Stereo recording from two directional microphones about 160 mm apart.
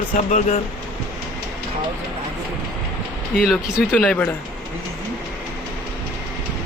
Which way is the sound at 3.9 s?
10° left (ahead or behind).